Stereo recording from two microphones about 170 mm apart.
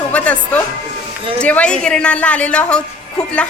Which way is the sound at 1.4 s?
5° left (ahead or behind).